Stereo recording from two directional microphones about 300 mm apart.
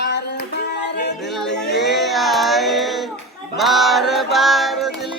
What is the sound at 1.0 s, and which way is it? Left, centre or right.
Music, left.